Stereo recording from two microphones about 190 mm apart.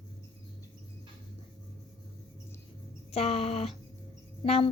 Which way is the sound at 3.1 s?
30° left (ahead or behind).